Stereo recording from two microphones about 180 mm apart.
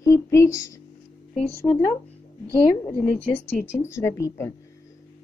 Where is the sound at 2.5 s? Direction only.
5° left (ahead or behind).